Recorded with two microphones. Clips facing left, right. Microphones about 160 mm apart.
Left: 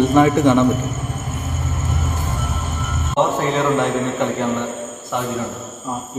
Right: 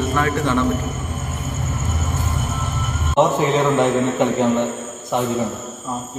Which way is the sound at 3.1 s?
15° right (ahead or behind).